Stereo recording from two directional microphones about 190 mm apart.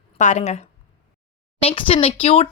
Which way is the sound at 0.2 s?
40° left (ahead or behind).